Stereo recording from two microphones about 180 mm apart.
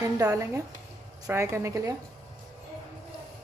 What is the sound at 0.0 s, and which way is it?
A woman's voice, 20° right (ahead or behind).